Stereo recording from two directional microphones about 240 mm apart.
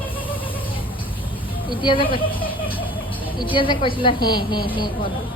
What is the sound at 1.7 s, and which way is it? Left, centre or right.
A woman's voice, left.